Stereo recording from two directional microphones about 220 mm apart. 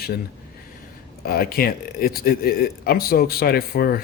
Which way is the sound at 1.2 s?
45° left (ahead or behind).